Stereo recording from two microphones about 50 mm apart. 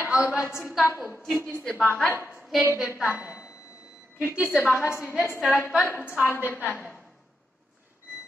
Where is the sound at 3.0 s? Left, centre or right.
Right.